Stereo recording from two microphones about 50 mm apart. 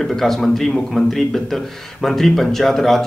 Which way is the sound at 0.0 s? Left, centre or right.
Centre.